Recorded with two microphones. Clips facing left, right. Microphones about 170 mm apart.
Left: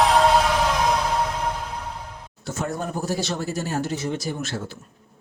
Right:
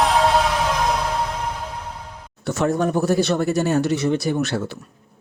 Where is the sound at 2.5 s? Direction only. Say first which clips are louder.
Right 8 dB; 75° right (ahead or behind).